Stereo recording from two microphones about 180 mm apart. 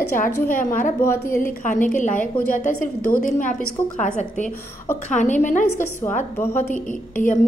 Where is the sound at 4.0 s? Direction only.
40° left (ahead or behind).